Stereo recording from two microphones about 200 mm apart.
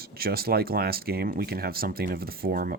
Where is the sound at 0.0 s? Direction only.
50° right (ahead or behind).